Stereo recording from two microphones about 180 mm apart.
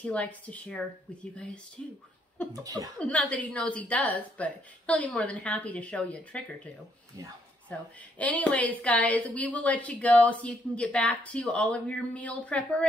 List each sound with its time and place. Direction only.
0.0 s a woman's voice: 5° left (ahead or behind)
2.5 s speech: 20° right (ahead or behind)
3.0 s a woman's voice: 10° left (ahead or behind)
7.7 s a woman's voice: 5° left (ahead or behind)